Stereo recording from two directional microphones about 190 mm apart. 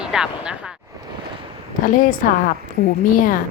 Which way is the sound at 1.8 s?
45° left (ahead or behind).